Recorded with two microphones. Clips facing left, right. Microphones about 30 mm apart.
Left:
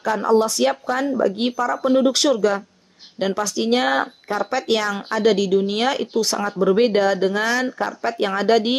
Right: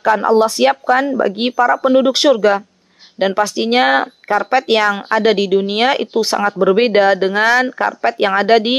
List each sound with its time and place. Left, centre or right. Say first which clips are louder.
0.0 s speech: right 5 dB; right